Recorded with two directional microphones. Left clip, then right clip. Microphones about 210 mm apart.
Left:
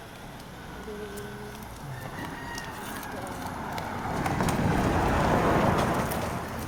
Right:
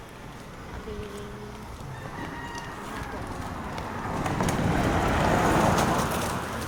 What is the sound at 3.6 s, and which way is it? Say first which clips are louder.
Vehicle: left 1 dB; 20° left (ahead or behind).